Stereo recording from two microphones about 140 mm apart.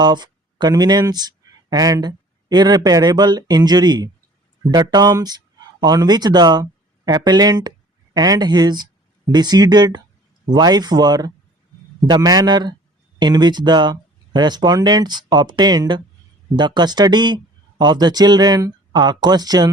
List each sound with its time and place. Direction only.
0.0 s speech: 30° right (ahead or behind)